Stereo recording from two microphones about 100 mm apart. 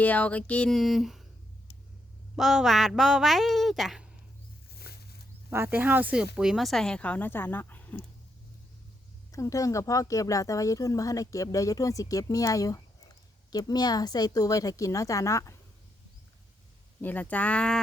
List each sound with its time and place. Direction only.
0.0 s speech: 15° left (ahead or behind)
0.7 s speech: centre (ahead or behind)
2.3 s speech: 5° right (ahead or behind)
5.5 s speech: 25° right (ahead or behind); by 8.0 s 20° left (ahead or behind)
9.3 s speech: 30° left (ahead or behind)
17.0 s speech: 15° left (ahead or behind)